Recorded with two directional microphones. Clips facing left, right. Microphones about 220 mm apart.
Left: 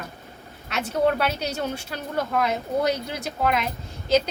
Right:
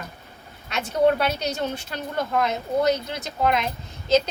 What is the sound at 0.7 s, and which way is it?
Speech, 5° left (ahead or behind).